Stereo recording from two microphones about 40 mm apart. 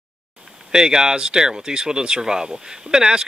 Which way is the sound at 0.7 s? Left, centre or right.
Centre.